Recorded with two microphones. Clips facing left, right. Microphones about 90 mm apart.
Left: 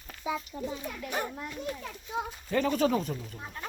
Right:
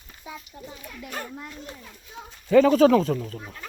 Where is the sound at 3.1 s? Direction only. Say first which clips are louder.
Right 10 dB; 90° right.